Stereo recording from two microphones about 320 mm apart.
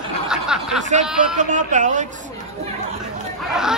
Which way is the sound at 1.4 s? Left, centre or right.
Right.